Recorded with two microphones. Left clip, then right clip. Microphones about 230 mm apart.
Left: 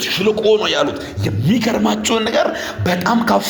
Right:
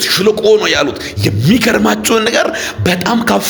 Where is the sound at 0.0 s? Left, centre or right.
Right.